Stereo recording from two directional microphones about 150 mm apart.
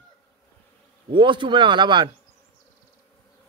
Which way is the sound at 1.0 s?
30° right (ahead or behind).